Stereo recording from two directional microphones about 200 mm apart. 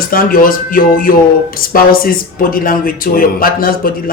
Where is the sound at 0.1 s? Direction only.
45° left (ahead or behind).